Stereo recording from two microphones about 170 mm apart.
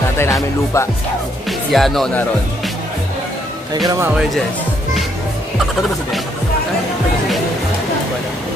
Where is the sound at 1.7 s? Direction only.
Centre (ahead or behind).